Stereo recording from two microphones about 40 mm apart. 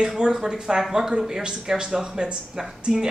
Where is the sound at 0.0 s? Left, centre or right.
Centre.